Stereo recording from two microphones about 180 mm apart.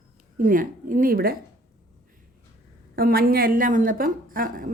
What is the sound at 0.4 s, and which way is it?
Speech, 50° right (ahead or behind).